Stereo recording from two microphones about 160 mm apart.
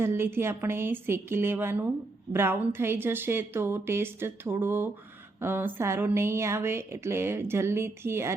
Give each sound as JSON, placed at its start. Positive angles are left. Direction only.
{"t": 0.0, "sound": "speech", "side_deg": -15}